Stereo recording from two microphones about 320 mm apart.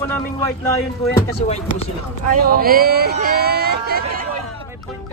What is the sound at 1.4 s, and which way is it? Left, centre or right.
Speech, left.